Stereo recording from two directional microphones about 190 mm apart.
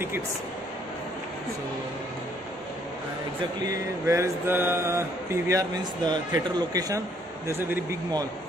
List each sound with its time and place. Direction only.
4.0 s speech: 15° right (ahead or behind)